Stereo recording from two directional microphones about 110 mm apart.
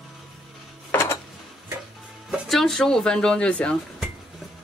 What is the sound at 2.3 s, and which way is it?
Speech, centre (ahead or behind).